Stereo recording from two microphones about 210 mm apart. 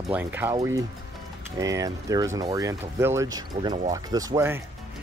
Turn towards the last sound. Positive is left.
turn(degrees=-10)  # may be behind; listen again after turning